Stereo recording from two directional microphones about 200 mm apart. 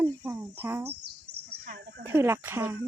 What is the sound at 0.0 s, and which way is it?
Speech, 10° right (ahead or behind).